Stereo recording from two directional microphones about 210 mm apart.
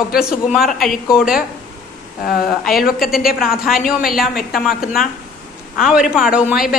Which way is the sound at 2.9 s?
Centre (ahead or behind).